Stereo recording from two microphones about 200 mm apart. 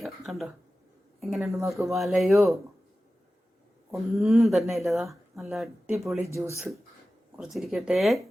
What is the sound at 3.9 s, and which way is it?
Speech, centre (ahead or behind).